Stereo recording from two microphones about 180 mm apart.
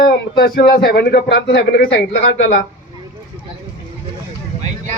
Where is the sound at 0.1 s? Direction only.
60° left (ahead or behind).